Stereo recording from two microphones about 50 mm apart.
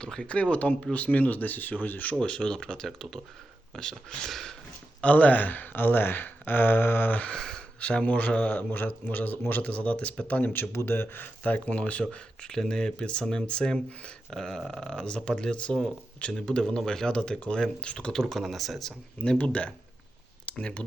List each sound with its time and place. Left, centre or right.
0.0 s speech: centre; by 2.1 s left
2.1 s speech: centre
4.3 s a sound: centre
4.9 s speech: left
7.3 s a sound: centre
7.8 s speech: left
8.5 s speech: left
9.7 s speech: left
10.5 s speech: left
11.4 s speech: left; by 18.9 s centre
19.2 s speech: left
20.4 s a sound: left